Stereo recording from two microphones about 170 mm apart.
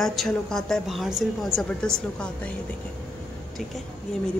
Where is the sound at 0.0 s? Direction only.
Centre (ahead or behind).